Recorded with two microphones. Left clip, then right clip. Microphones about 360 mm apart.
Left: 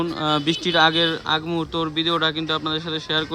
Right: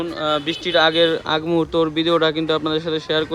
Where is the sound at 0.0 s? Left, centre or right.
Centre.